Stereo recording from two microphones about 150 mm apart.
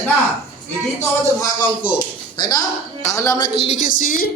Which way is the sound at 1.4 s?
30° left (ahead or behind).